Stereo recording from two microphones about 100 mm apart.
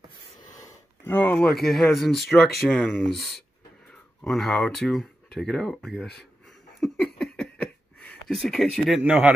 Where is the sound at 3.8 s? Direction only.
5° left (ahead or behind).